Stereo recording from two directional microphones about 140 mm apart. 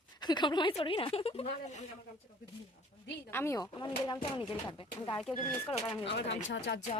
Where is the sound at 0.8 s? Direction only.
40° left (ahead or behind).